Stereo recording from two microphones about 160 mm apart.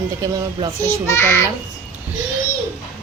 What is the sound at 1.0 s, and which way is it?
Speech, 15° left (ahead or behind).